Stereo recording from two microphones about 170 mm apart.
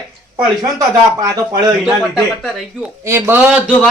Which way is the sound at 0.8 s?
20° right (ahead or behind).